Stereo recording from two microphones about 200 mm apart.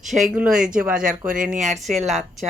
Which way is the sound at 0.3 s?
5° right (ahead or behind).